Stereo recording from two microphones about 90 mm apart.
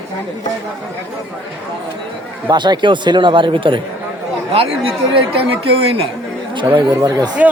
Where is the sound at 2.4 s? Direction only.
55° right (ahead or behind).